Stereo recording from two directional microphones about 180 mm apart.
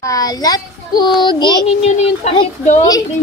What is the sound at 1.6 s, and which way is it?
Speech, 35° left (ahead or behind).